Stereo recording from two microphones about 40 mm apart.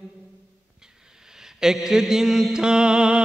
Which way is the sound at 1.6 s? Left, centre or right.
Centre.